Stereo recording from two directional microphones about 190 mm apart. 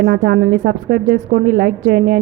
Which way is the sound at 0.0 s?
55° right (ahead or behind).